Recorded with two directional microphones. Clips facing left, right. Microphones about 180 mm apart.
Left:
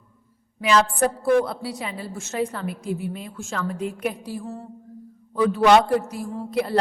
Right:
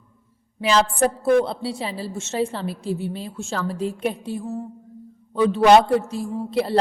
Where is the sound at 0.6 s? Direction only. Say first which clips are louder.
Right 1 dB; 30° right (ahead or behind).